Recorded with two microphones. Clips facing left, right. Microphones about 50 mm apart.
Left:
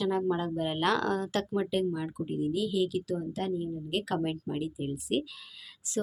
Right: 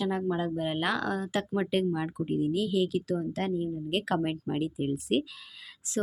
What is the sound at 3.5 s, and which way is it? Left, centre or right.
Speech, right.